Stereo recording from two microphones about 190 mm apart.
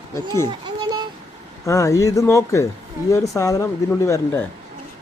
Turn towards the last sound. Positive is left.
turn(degrees=15)  # may be behind; listen again after turning